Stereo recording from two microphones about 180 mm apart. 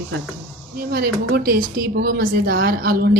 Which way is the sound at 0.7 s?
60° right (ahead or behind).